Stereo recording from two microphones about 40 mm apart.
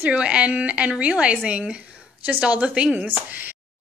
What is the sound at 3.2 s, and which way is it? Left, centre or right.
Speech, right.